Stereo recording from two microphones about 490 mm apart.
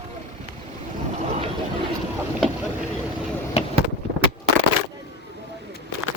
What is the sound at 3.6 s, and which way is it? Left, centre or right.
Vehicle, centre.